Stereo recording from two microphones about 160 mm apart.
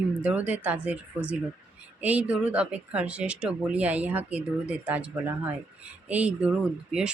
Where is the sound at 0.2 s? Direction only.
10° right (ahead or behind).